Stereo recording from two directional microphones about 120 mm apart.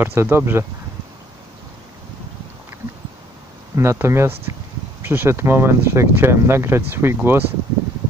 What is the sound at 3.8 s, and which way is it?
Speech, 20° right (ahead or behind).